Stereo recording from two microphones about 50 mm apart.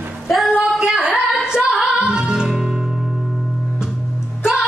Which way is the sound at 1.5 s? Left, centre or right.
Centre.